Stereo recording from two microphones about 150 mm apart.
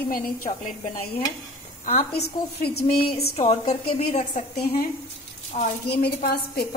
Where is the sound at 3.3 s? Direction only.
40° left (ahead or behind).